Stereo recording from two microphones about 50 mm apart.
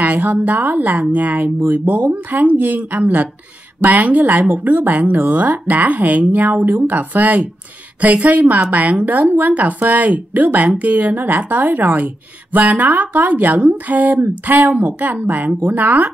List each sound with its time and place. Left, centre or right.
0.0 s speech: right